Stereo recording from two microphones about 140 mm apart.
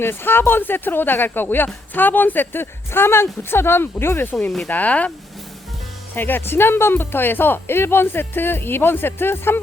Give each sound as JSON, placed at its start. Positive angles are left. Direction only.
{"t": 0.0, "sound": "speech", "side_deg": 15}
{"t": 4.4, "sound": "speech", "side_deg": 5}
{"t": 6.1, "sound": "speech", "side_deg": 15}